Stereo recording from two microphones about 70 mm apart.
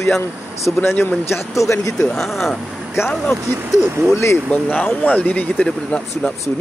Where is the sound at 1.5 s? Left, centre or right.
Left.